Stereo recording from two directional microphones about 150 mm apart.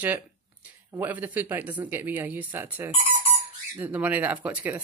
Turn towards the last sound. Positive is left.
turn(degrees=-10)  # may be behind; listen again after turning